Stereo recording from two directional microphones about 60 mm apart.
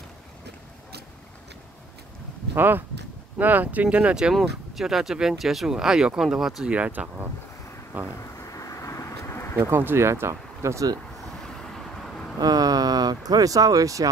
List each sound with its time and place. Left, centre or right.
2.5 s speech: right; by 6.7 s centre
6.7 s speech: right
8.4 s a sound: left
9.6 s speech: right
11.4 s vehicle: centre
12.4 s speech: right